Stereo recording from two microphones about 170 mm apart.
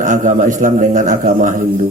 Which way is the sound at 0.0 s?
50° right (ahead or behind).